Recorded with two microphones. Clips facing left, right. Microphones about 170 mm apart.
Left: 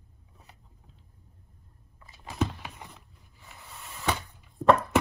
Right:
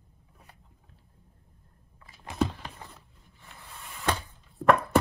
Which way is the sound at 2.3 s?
Centre (ahead or behind).